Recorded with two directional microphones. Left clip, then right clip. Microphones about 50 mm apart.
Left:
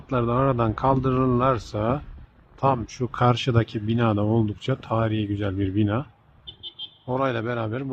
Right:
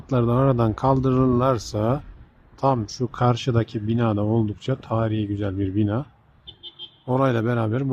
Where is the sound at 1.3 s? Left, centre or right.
Right.